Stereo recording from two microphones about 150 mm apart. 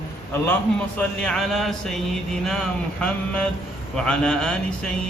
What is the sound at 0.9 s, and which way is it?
Mantra, 5° left (ahead or behind).